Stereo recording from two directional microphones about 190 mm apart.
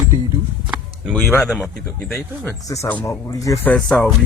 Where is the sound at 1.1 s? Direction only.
5° left (ahead or behind).